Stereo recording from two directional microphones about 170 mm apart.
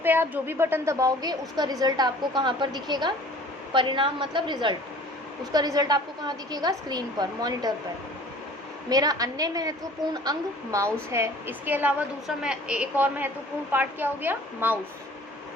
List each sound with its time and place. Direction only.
0.0 s a woman's voice: 10° right (ahead or behind)
8.9 s a woman's voice: 20° right (ahead or behind)